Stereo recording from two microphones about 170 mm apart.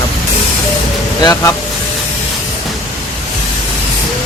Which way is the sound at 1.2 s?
20° left (ahead or behind).